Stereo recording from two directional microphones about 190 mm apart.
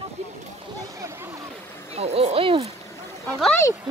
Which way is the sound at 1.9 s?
30° right (ahead or behind).